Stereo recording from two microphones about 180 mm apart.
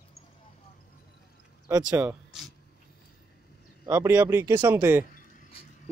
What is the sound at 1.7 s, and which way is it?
Speech, 20° right (ahead or behind).